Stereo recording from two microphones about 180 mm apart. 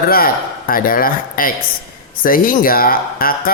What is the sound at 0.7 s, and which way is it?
Speech, 50° left (ahead or behind).